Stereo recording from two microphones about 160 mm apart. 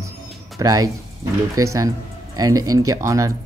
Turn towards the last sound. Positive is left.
turn(degrees=-20)  # may be behind; listen again after turning